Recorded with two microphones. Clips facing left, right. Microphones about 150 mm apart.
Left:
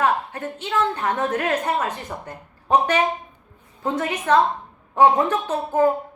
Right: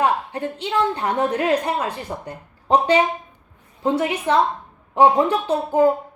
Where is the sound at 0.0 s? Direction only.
15° right (ahead or behind).